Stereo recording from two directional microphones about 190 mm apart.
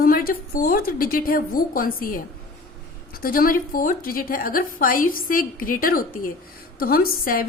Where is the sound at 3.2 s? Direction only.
50° left (ahead or behind).